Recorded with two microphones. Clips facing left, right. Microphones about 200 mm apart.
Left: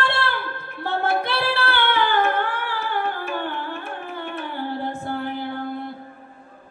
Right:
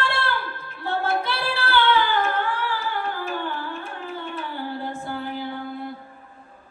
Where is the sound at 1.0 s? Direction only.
60° left (ahead or behind).